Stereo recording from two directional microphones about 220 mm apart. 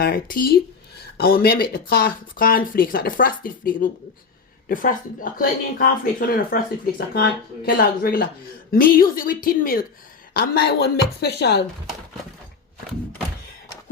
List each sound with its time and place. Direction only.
0.0 s speech: 40° left (ahead or behind)